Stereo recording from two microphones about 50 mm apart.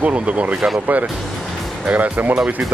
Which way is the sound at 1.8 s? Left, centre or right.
Right.